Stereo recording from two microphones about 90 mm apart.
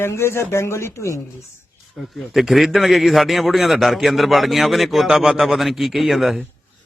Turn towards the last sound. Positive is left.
turn(degrees=0)  # may be behind; listen again after turning